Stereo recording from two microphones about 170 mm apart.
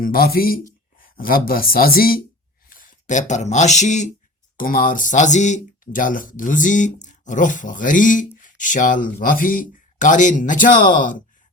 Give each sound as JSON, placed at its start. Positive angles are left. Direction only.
{"t": 0.0, "sound": "speech", "side_deg": 60}